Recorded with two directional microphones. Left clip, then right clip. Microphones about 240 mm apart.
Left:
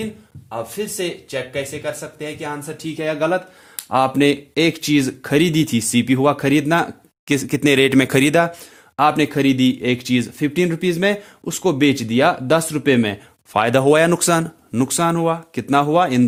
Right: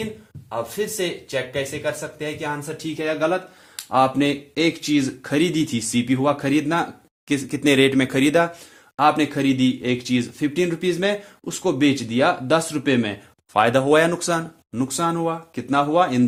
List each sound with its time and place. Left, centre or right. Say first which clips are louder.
0.9 s speech: even; centre
2.6 s speech: left 2 dB; left